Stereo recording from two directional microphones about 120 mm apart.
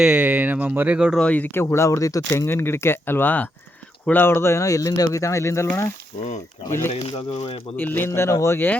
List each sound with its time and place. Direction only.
0.0 s speech: 10° right (ahead or behind)
1.2 s speech: 15° left (ahead or behind)
6.9 s speech: 50° left (ahead or behind)
7.8 s speech: 15° left (ahead or behind)